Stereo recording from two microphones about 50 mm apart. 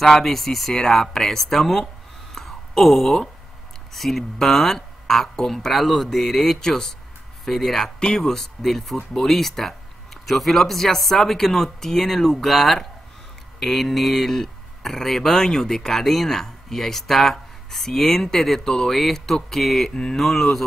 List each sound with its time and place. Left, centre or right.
0.0 s speech: centre
2.3 s a sound: centre
3.9 s speech: centre